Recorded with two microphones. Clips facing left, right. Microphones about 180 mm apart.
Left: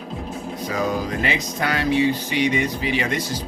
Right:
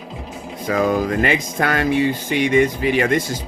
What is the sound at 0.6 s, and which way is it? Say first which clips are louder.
Speech: right 6 dB; 55° right (ahead or behind).